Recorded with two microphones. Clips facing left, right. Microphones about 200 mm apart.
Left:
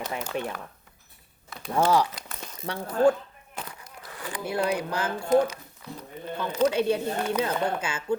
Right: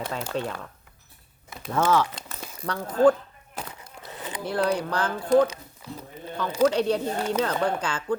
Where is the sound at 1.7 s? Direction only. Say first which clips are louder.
Even; 15° left (ahead or behind).